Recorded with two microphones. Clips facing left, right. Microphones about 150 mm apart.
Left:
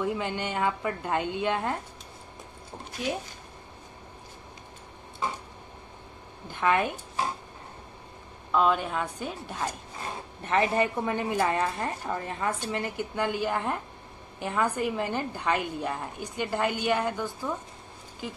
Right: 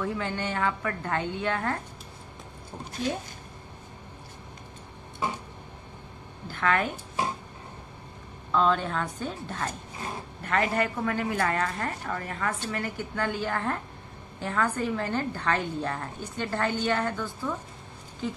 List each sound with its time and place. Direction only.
0.0 s a woman's voice: 15° left (ahead or behind)
6.4 s a woman's voice: 15° left (ahead or behind)
8.5 s a woman's voice: 10° left (ahead or behind)